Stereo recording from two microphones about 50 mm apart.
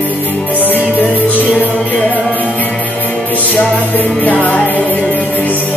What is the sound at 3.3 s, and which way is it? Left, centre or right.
Music, left.